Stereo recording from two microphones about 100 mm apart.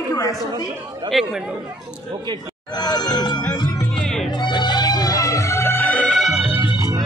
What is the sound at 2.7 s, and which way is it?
Speech, 45° left (ahead or behind).